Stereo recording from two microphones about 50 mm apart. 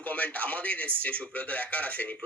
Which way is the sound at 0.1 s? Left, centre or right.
Left.